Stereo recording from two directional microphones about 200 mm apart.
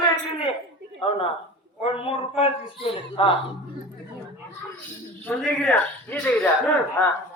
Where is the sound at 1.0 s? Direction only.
30° left (ahead or behind).